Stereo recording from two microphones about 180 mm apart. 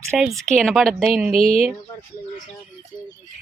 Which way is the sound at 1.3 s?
35° left (ahead or behind).